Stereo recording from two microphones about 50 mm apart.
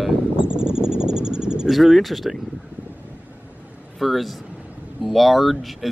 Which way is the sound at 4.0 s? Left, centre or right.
Centre.